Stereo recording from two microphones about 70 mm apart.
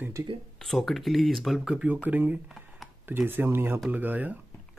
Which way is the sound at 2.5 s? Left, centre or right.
Centre.